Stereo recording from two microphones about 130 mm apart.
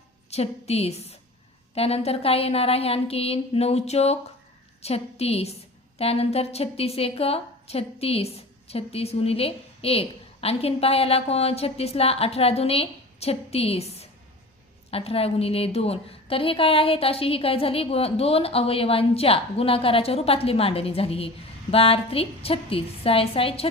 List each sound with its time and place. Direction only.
0.3 s a woman's voice: 55° left (ahead or behind)